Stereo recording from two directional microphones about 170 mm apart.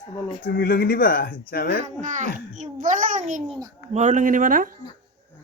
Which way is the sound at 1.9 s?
45° right (ahead or behind).